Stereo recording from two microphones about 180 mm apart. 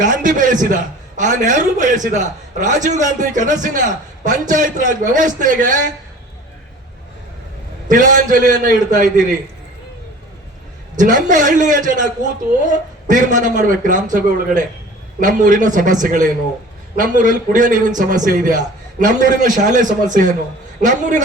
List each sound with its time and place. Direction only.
0.0 s a man's voice: 45° right (ahead or behind)
7.9 s a man's voice: 45° right (ahead or behind)
10.9 s a man's voice: 45° right (ahead or behind)